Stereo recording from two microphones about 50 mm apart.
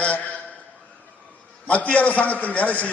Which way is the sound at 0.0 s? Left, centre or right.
Left.